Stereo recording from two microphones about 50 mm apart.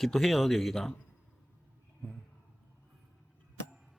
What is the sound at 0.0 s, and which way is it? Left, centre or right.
Speech, centre.